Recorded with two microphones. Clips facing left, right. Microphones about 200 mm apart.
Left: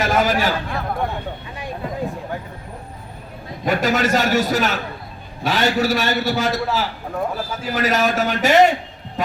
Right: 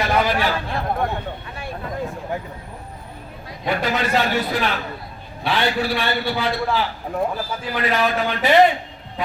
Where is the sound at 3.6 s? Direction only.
45° left (ahead or behind).